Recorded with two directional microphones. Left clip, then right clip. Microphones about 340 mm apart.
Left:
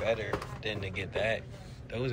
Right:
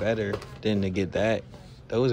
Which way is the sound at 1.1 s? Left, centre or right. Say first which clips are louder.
Right 5 dB; right.